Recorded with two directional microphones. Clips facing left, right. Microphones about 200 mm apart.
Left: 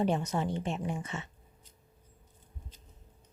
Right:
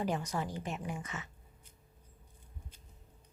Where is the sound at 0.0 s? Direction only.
25° left (ahead or behind).